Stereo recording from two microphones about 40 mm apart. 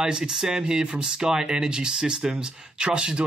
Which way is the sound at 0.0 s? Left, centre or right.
Centre.